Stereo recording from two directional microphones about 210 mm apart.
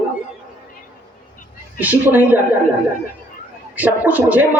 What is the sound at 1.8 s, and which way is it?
Speech, 10° right (ahead or behind).